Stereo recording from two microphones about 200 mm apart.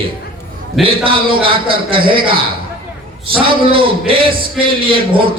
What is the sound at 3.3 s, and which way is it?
Speech, 25° right (ahead or behind).